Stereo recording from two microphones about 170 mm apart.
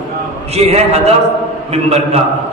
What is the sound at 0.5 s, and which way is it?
A man's voice, 40° right (ahead or behind).